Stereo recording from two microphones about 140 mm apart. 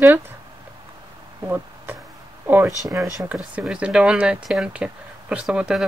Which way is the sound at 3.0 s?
Centre (ahead or behind).